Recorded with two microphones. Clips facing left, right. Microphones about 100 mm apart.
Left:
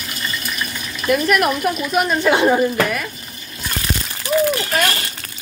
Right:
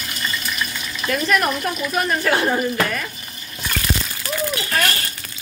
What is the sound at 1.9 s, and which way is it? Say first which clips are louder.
Speech: left 3 dB; 20° left (ahead or behind).